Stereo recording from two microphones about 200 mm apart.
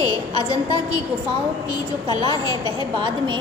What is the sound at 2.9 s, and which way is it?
Speech, 25° right (ahead or behind).